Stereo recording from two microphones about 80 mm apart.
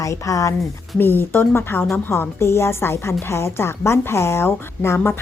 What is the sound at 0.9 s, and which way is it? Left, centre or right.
A woman's voice, left.